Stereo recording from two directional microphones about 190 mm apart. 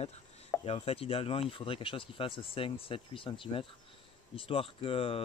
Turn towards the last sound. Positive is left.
turn(degrees=30)  # may be behind; listen again after turning